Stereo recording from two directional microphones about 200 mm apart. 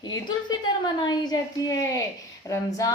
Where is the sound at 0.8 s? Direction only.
20° left (ahead or behind).